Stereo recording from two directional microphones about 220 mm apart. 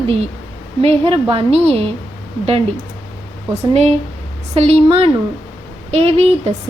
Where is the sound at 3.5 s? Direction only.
30° right (ahead or behind).